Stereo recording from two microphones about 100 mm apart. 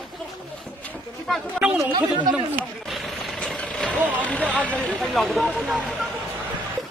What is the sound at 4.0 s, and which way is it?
Vehicle, 15° right (ahead or behind).